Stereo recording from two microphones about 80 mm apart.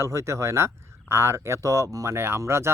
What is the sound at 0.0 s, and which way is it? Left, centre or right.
Speech, right.